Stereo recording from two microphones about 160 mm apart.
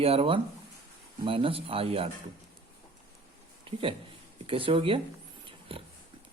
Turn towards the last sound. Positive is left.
turn(degrees=-35)  # may be behind; listen again after turning